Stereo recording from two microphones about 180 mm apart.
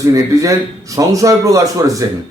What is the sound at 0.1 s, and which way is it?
A man's voice, 20° right (ahead or behind).